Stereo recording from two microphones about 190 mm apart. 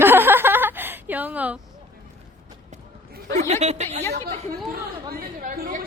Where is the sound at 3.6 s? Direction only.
35° right (ahead or behind).